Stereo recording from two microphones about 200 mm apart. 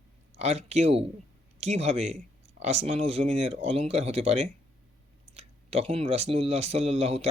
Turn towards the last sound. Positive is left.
turn(degrees=-30)  # may be behind; listen again after turning